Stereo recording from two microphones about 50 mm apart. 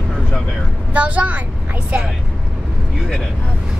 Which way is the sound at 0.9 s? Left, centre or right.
Right.